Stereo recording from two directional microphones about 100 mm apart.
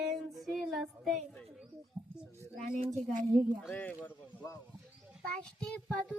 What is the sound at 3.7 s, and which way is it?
Child singing, 15° left (ahead or behind).